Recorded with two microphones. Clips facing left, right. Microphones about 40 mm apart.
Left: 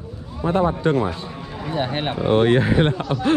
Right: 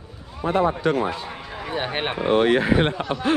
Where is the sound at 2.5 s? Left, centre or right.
Right.